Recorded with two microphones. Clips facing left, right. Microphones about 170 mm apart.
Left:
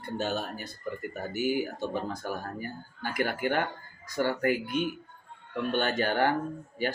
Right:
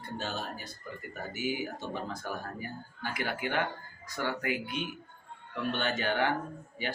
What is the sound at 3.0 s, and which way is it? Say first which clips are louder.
Speech: left 5 dB; 50° left (ahead or behind).